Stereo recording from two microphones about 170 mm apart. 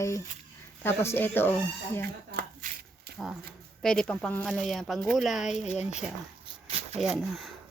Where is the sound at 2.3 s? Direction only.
65° right (ahead or behind).